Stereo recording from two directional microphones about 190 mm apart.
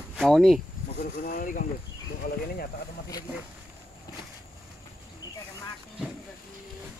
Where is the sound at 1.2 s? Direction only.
45° left (ahead or behind).